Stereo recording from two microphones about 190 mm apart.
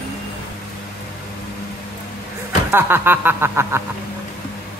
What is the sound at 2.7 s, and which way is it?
Speech, 10° right (ahead or behind).